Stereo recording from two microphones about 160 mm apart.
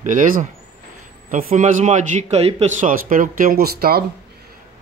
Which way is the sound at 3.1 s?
60° right (ahead or behind).